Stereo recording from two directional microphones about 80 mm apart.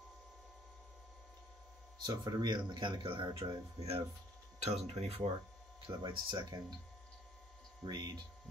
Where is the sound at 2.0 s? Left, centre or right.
Right.